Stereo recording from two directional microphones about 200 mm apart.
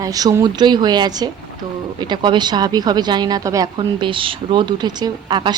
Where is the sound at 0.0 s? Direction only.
20° right (ahead or behind).